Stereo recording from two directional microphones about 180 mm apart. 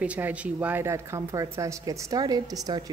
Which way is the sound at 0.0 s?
5° right (ahead or behind).